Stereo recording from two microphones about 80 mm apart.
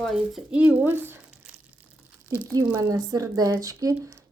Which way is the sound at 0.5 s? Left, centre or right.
Right.